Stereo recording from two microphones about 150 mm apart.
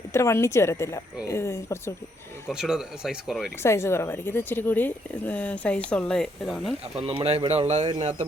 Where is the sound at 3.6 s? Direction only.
15° left (ahead or behind).